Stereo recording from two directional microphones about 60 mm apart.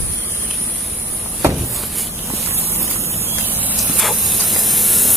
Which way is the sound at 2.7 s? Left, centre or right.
Right.